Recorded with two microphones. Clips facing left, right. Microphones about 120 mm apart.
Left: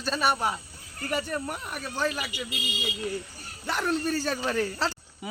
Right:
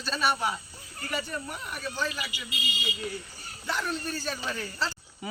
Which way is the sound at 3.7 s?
60° left (ahead or behind).